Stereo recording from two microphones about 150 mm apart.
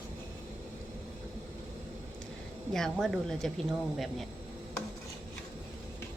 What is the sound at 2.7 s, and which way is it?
Speech, centre (ahead or behind).